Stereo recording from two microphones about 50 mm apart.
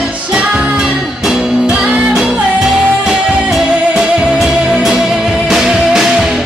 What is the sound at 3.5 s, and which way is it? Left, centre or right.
Music, centre.